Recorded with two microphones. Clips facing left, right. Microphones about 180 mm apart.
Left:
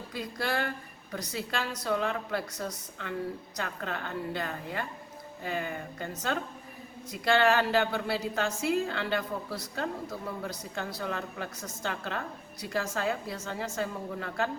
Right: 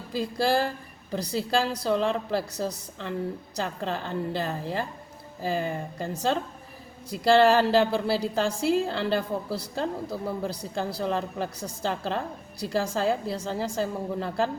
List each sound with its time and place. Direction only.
0.3 s a woman's voice: 30° right (ahead or behind)
7.1 s a woman's voice: 30° right (ahead or behind)